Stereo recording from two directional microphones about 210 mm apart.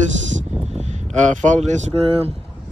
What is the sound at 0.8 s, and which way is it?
Speech, 35° right (ahead or behind).